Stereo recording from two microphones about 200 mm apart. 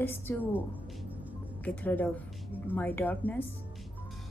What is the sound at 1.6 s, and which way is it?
A woman's voice, 10° left (ahead or behind).